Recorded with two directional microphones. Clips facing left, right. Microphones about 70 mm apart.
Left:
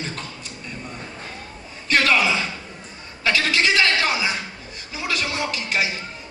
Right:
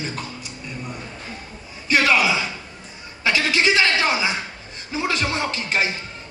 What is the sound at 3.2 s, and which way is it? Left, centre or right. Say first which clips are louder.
A man's voice: right 1 dB; right.